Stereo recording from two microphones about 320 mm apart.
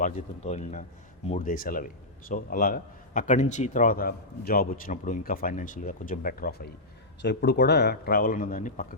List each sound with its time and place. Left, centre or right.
0.0 s a man's voice: left